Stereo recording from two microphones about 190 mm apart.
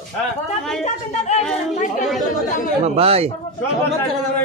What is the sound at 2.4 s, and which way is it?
Chatter, 45° left (ahead or behind).